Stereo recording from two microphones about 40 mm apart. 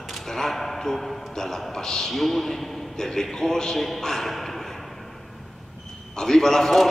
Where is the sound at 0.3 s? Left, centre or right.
Centre.